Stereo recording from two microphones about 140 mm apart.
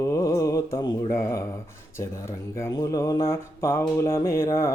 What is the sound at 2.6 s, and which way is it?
Mantra, 25° left (ahead or behind).